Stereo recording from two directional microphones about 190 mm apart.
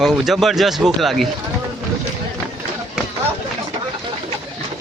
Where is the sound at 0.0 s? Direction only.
Centre (ahead or behind).